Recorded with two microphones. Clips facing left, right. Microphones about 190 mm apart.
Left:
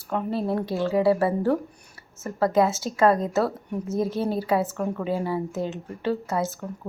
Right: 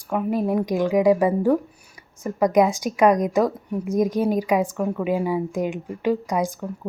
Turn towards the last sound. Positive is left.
turn(degrees=-15)  # may be behind; listen again after turning